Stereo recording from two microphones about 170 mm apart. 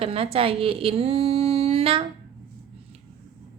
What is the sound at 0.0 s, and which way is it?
Speech, 35° right (ahead or behind).